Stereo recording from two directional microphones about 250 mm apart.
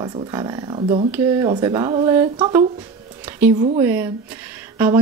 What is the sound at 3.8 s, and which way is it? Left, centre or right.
A woman's voice, centre.